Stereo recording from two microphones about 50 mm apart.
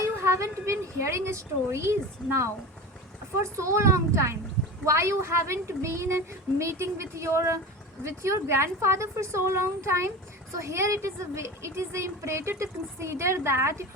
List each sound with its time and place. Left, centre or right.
0.0 s a woman's voice: right
3.4 s a woman's voice: right
10.6 s a woman's voice: right